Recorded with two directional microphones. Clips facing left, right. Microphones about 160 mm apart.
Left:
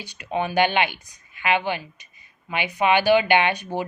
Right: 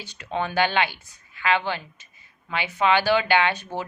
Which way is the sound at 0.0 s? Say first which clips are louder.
Left 2 dB; 15° left (ahead or behind).